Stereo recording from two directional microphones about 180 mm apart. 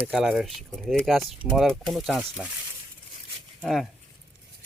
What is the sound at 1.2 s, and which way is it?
Speech, 30° right (ahead or behind).